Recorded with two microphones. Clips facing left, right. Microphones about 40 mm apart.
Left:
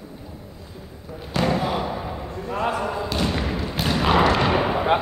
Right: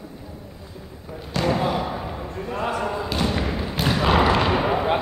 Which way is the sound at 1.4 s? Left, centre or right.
Centre.